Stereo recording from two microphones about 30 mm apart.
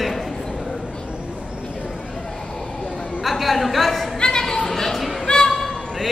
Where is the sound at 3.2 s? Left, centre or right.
Centre.